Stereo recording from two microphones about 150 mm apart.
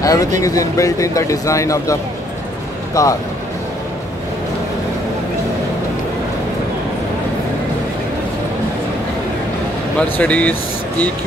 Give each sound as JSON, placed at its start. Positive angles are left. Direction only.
{"t": 0.0, "sound": "speech", "side_deg": 20}
{"t": 9.9, "sound": "speech", "side_deg": 10}